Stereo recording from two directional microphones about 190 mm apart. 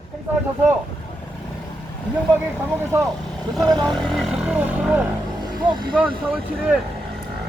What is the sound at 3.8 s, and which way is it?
Speech, 5° left (ahead or behind).